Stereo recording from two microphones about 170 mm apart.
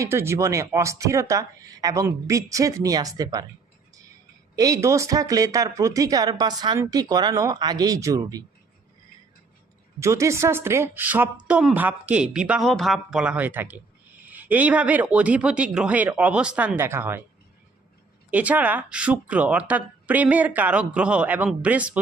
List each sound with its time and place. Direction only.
0.0 s speech: 15° right (ahead or behind)
4.5 s speech: 20° right (ahead or behind)
10.0 s speech: 15° right (ahead or behind)
18.3 s speech: 10° right (ahead or behind)